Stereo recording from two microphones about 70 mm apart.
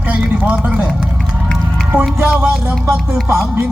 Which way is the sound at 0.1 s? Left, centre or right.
Centre.